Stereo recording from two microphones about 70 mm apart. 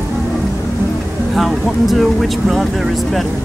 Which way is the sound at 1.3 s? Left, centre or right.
Centre.